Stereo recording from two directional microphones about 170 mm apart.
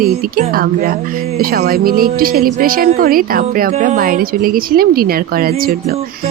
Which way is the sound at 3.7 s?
45° right (ahead or behind).